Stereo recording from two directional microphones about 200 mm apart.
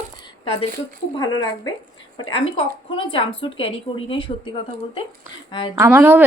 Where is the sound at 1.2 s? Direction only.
20° left (ahead or behind).